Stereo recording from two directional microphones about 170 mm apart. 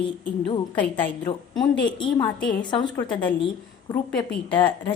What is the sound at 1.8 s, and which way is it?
Speech, 25° left (ahead or behind).